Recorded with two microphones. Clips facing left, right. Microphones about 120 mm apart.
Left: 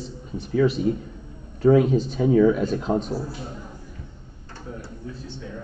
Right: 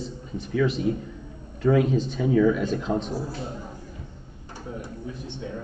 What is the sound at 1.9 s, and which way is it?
Speech, 40° left (ahead or behind).